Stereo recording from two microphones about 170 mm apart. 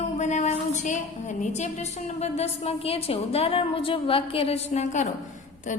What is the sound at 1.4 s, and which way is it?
A woman's voice, 45° left (ahead or behind).